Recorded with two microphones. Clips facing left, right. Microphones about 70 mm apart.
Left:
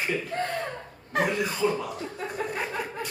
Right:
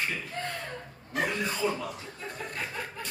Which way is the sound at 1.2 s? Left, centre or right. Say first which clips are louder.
Left 4 dB; centre.